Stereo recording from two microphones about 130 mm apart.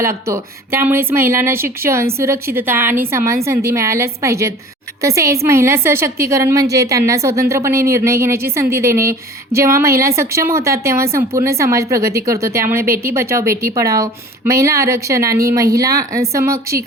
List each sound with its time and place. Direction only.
0.0 s a woman's voice: 20° right (ahead or behind)